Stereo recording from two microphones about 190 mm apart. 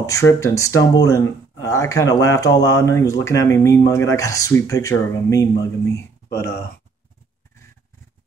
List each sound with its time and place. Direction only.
0.0 s speech: 15° left (ahead or behind)